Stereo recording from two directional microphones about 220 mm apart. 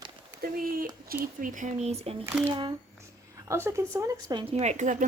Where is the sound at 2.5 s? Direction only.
20° right (ahead or behind).